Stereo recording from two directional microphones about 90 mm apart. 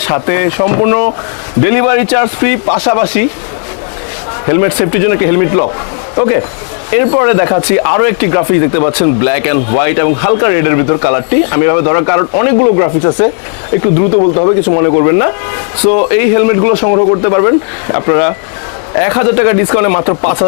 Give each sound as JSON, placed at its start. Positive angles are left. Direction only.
{"t": 0.0, "sound": "speech", "side_deg": 20}
{"t": 4.4, "sound": "speech", "side_deg": 20}
{"t": 6.9, "sound": "speech", "side_deg": 15}
{"t": 14.8, "sound": "speech", "side_deg": 25}